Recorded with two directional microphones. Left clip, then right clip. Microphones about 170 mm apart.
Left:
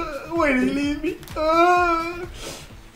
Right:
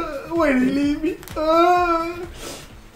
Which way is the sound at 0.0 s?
10° left (ahead or behind).